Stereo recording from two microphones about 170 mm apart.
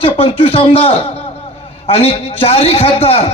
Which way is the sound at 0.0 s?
35° left (ahead or behind).